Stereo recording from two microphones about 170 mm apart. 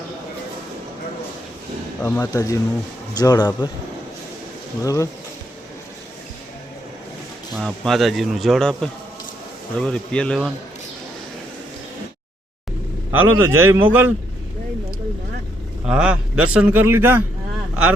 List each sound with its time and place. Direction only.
2.0 s speech: 15° left (ahead or behind)
4.8 s speech: 20° left (ahead or behind)
7.5 s speech: centre (ahead or behind)
13.1 s a man's voice: 15° right (ahead or behind)
15.9 s a man's voice: 5° right (ahead or behind)